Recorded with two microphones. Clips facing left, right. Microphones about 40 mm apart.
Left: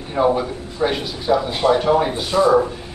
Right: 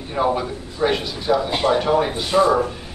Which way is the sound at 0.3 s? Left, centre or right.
Centre.